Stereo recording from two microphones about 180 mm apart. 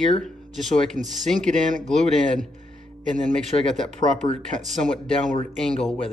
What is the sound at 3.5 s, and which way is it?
Speech, 30° left (ahead or behind).